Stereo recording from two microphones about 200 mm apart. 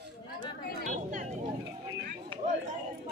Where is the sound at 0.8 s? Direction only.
40° right (ahead or behind).